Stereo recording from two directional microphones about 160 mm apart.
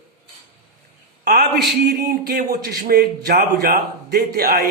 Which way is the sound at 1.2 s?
90° right.